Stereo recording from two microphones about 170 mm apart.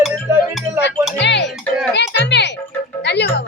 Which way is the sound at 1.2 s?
90° left.